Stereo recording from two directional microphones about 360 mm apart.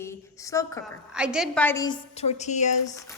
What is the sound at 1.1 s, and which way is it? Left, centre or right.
A woman's voice, centre.